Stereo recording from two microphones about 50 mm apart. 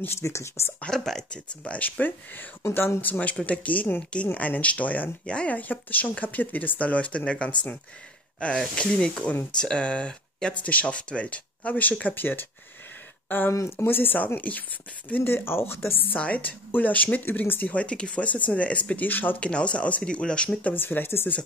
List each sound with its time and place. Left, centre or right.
0.2 s speech: left
0.8 s speech: centre
1.3 s speech: left
2.6 s speech: left
3.1 s speech: left
13.5 s speech: left
15.2 s speech: left
16.2 s speech: left
17.6 s speech: left
19.4 s speech: left
20.7 s speech: left